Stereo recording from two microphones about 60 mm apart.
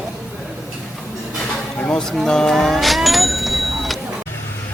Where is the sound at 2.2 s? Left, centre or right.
Centre.